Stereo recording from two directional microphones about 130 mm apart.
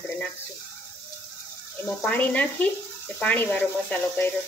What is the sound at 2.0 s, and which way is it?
Speech, 10° left (ahead or behind).